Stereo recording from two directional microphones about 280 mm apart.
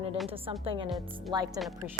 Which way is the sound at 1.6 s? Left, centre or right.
Centre.